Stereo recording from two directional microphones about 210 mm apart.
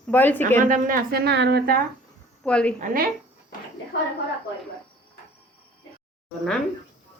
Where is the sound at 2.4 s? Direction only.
5° left (ahead or behind).